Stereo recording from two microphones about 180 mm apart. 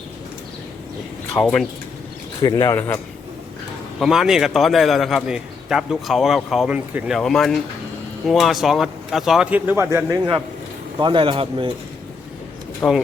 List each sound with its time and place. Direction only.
1.3 s a man's voice: centre (ahead or behind)
2.4 s speech: 20° left (ahead or behind)
4.0 s a man's voice: centre (ahead or behind); by 11.7 s 30° right (ahead or behind)
12.8 s speech: 10° left (ahead or behind)